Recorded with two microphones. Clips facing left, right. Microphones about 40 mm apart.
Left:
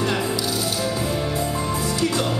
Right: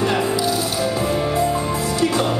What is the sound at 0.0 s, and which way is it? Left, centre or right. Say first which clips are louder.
Music: right 4 dB; centre.